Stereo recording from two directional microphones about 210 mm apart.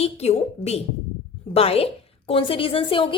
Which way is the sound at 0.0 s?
30° left (ahead or behind).